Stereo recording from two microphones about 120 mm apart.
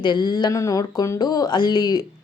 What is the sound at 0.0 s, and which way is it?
Speech, 40° left (ahead or behind).